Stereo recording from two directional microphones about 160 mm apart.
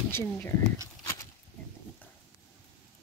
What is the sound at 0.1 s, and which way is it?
Speech, 15° left (ahead or behind).